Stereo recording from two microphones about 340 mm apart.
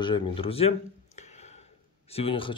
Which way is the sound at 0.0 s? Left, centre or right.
Centre.